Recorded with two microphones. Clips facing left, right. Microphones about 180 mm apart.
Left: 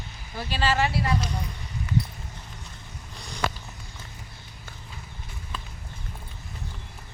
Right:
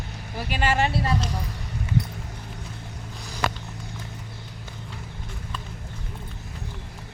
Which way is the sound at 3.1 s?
5° right (ahead or behind).